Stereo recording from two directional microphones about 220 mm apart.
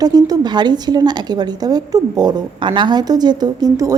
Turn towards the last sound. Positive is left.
turn(degrees=-15)  # may be behind; listen again after turning